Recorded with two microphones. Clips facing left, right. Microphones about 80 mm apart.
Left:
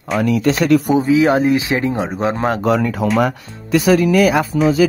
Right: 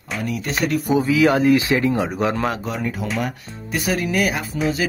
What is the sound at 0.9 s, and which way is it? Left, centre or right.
Speech, left.